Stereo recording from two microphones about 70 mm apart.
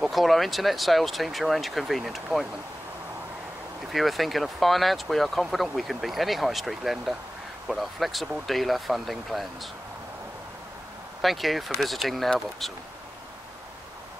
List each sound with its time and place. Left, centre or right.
0.0 s speech: centre
3.9 s speech: centre
11.1 s speech: centre